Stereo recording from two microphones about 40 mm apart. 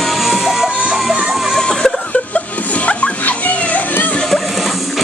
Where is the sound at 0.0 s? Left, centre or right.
Centre.